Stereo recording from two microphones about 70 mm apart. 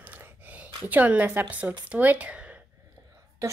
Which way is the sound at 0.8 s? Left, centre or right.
Right.